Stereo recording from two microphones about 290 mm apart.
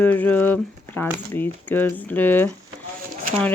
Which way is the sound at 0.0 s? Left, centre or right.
Centre.